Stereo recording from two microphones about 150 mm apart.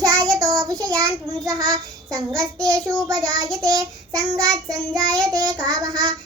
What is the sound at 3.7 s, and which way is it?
Child singing, 25° right (ahead or behind).